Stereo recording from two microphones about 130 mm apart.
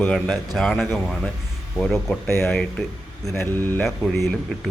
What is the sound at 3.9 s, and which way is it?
Speech, centre (ahead or behind).